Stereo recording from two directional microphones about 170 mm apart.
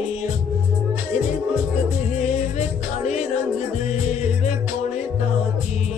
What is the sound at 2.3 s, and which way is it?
Music, 40° left (ahead or behind).